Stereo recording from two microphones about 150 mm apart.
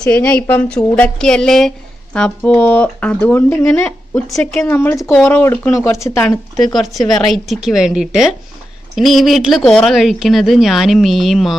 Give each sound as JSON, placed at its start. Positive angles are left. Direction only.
{"t": 0.0, "sound": "a woman's voice", "side_deg": 5}
{"t": 6.6, "sound": "a woman's voice", "side_deg": 0}